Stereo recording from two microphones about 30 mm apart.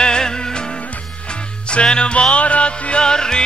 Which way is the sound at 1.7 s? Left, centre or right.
Left.